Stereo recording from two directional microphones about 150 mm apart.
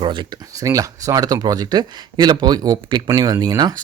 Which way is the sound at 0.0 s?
35° right (ahead or behind).